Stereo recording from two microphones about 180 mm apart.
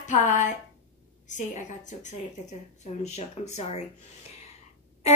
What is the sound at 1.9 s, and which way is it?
Speech, 40° left (ahead or behind).